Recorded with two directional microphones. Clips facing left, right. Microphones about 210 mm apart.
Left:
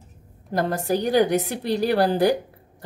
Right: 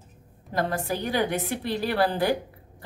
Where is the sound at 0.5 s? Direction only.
40° left (ahead or behind).